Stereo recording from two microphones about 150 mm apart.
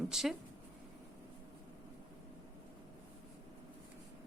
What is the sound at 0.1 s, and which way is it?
Speech, centre (ahead or behind).